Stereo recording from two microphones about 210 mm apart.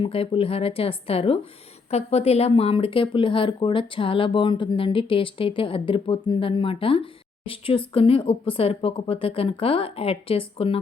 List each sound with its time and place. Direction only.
0.0 s speech: 25° left (ahead or behind)